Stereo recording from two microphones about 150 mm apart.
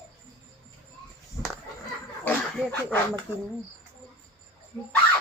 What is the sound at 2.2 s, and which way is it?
Dog, 10° left (ahead or behind).